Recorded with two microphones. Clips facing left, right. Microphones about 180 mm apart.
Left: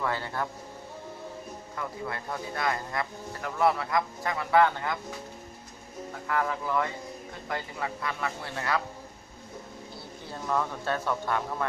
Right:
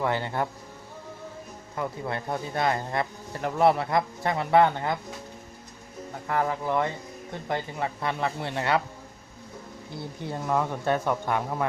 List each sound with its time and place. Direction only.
0.0 s speech: 20° right (ahead or behind)
1.7 s speech: 25° right (ahead or behind)
6.2 s speech: 30° right (ahead or behind)
10.4 s speech: 15° right (ahead or behind)